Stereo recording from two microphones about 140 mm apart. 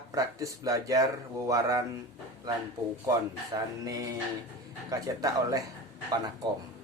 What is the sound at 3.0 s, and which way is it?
Speech, 25° right (ahead or behind).